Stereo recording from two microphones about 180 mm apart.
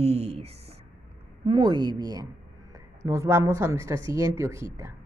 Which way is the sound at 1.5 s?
25° right (ahead or behind).